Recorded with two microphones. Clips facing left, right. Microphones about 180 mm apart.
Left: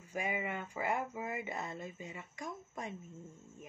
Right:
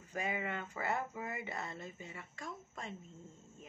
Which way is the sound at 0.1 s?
10° left (ahead or behind).